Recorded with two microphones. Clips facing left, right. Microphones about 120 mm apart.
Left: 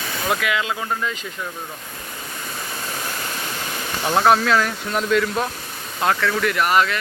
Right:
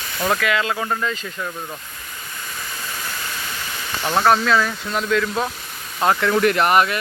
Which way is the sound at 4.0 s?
5° left (ahead or behind).